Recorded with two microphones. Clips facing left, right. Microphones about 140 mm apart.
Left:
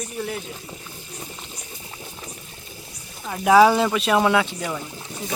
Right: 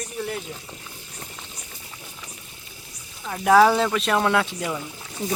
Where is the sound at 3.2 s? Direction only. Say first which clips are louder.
Left 1 dB; 5° left (ahead or behind).